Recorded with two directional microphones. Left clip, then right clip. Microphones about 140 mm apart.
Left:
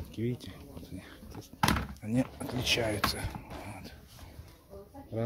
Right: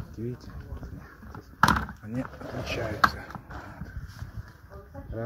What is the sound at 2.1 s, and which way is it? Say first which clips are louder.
Speech: left 3 dB; 55° left (ahead or behind).